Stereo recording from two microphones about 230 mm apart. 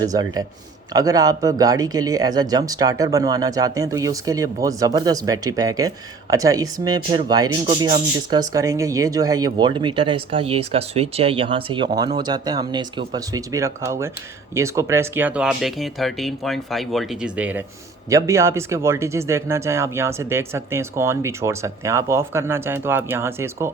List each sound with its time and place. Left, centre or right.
0.0 s speech: centre